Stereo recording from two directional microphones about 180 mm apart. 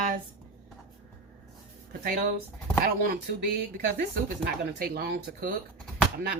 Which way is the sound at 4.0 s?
60° right (ahead or behind).